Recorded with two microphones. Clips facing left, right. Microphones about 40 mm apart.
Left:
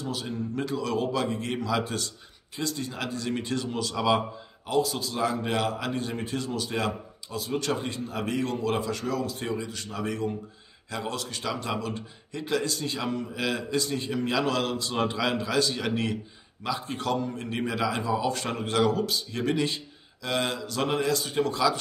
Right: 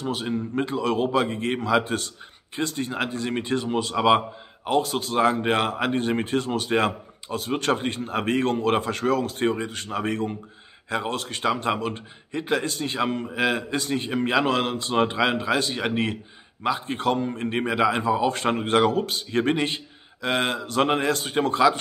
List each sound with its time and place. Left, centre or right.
0.0 s a man's voice: right